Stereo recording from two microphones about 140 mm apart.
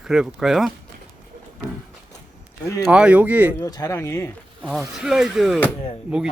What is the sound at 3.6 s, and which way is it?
Speech, 25° left (ahead or behind).